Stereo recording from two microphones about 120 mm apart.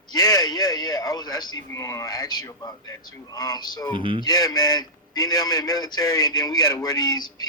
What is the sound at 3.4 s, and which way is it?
Speech, 35° left (ahead or behind).